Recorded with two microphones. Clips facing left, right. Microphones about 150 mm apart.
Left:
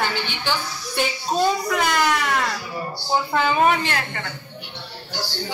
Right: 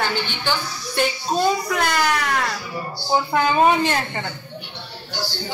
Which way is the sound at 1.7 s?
Centre (ahead or behind).